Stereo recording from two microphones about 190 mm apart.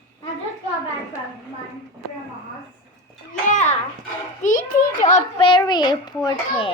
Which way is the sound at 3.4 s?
40° left (ahead or behind).